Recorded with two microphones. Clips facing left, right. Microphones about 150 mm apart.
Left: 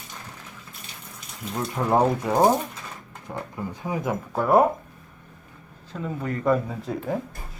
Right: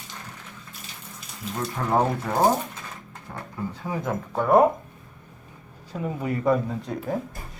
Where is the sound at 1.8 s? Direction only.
15° left (ahead or behind).